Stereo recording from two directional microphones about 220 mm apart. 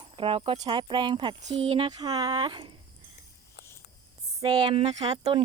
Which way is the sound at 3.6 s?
45° left (ahead or behind).